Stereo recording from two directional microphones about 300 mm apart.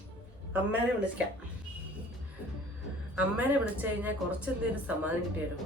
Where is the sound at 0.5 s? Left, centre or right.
Centre.